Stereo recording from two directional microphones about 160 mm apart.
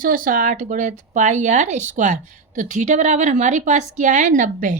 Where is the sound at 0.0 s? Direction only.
55° right (ahead or behind).